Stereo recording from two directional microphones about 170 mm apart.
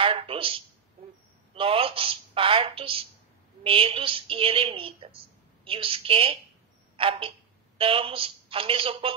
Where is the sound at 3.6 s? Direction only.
30° right (ahead or behind).